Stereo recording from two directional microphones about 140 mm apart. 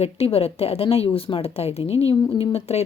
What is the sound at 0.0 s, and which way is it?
A woman's voice, 45° left (ahead or behind).